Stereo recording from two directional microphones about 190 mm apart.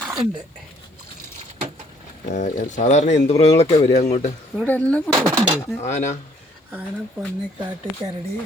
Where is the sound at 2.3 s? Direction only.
40° left (ahead or behind).